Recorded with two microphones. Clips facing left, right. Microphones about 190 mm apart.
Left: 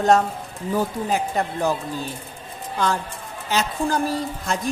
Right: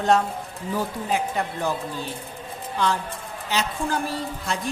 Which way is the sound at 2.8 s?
45° left (ahead or behind).